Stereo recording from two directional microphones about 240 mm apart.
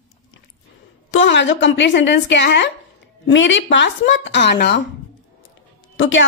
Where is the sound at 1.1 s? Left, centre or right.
Left.